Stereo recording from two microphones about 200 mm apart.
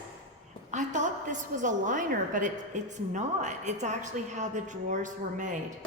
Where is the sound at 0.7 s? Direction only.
35° right (ahead or behind).